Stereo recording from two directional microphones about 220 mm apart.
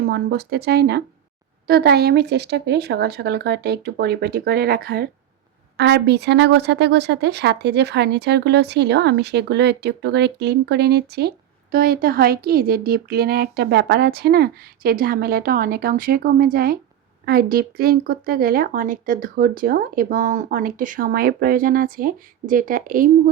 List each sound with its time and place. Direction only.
0.1 s a woman's voice: 45° right (ahead or behind)